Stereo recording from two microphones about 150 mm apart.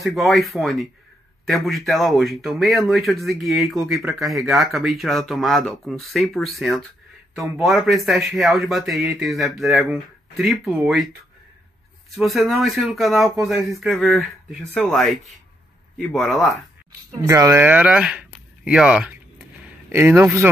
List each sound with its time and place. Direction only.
0.0 s speech: centre (ahead or behind)
12.2 s speech: centre (ahead or behind)
17.1 s speech: 25° right (ahead or behind); by 19.1 s 5° right (ahead or behind)
19.9 s a man's voice: 15° right (ahead or behind)